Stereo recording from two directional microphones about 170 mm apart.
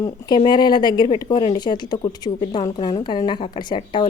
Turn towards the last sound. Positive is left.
turn(degrees=25)  # may be behind; listen again after turning